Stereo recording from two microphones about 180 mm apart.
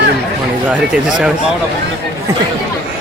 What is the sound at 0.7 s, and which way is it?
Speech, 5° right (ahead or behind).